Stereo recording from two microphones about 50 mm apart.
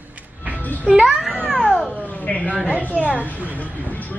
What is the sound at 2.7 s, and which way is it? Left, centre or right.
Speech, right.